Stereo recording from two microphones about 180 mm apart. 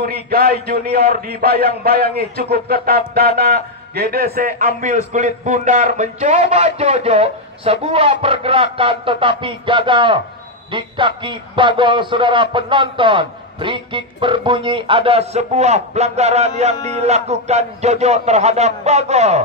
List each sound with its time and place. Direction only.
0.0 s a man's voice: 60° right (ahead or behind); by 19.4 s 40° right (ahead or behind)